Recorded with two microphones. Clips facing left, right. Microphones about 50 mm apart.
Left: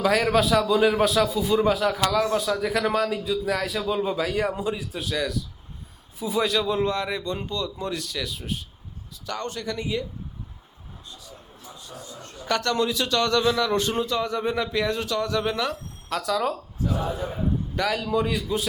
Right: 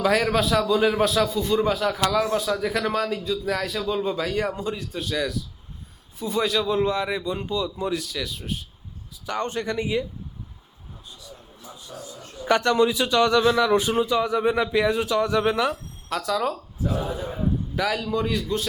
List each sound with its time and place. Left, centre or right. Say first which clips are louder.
0.0 s a man's voice: even; centre
9.2 s speech: right 4 dB; right
11.9 s a man's voice: right 3 dB; centre
12.5 s a man's voice: right 4 dB; centre
16.0 s a man's voice: even; centre